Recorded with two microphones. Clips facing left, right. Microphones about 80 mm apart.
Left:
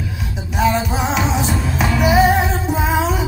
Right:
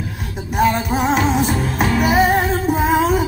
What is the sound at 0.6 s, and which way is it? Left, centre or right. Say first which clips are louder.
Music: right 1 dB; right.